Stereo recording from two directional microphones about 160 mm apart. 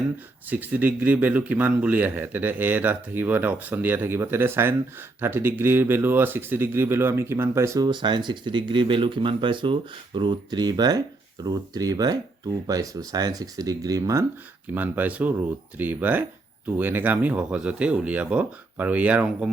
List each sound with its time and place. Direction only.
0.5 s speech: 10° right (ahead or behind)
14.8 s speech: 10° right (ahead or behind)